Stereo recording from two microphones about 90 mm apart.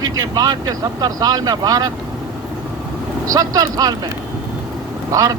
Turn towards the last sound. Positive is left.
turn(degrees=-45)  # may be behind; listen again after turning